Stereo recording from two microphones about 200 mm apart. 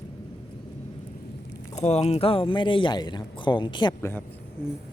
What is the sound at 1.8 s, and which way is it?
Speech, 35° left (ahead or behind).